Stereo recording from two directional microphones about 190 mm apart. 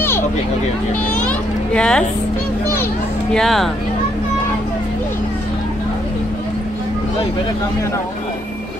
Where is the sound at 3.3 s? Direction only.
Centre (ahead or behind).